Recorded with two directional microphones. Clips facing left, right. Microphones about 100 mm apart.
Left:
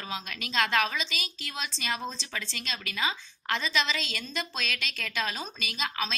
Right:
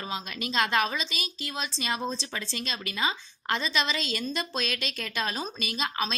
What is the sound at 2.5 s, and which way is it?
A woman's voice, 30° right (ahead or behind).